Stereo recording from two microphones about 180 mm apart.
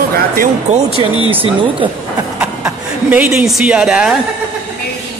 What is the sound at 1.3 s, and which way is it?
Speech, 30° right (ahead or behind).